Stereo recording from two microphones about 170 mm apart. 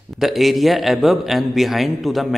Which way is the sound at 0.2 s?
Centre (ahead or behind).